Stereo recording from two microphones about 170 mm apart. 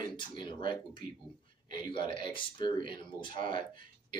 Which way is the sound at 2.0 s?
30° left (ahead or behind).